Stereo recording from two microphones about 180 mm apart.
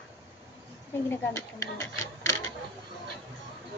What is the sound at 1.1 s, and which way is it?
Speech, 15° left (ahead or behind).